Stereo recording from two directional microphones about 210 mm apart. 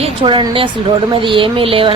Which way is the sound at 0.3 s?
25° right (ahead or behind).